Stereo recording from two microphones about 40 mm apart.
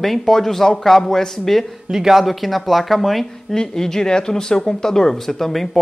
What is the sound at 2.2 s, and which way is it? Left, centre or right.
Speech, centre.